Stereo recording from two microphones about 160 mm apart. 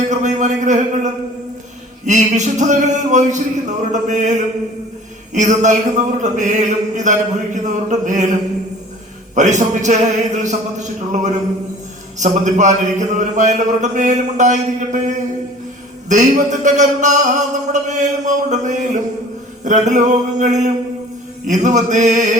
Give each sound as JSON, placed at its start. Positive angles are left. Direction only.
{"t": 0.1, "sound": "a sound", "side_deg": -50}
{"t": 2.0, "sound": "a man's voice", "side_deg": -50}
{"t": 9.3, "sound": "a man's voice", "side_deg": -50}